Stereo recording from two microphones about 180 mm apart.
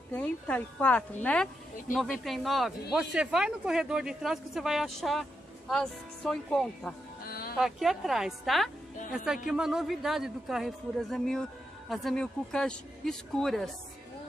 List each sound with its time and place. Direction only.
0.1 s a woman's voice: 10° left (ahead or behind)
7.2 s music: 55° left (ahead or behind)
7.5 s a woman's voice: centre (ahead or behind)